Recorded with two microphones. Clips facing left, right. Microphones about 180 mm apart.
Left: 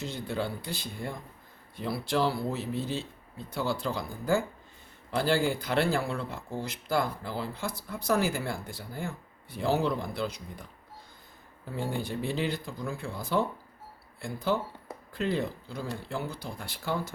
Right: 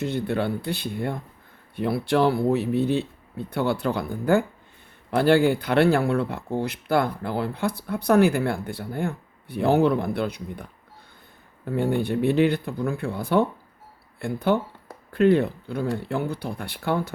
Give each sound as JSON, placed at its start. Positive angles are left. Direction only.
{"t": 0.0, "sound": "speech", "side_deg": -60}